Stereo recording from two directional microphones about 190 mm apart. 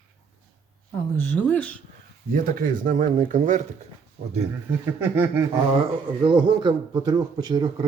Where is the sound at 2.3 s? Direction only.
45° right (ahead or behind).